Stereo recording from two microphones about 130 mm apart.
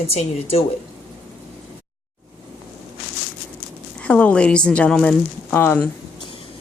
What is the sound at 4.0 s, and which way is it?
Speech, 10° left (ahead or behind).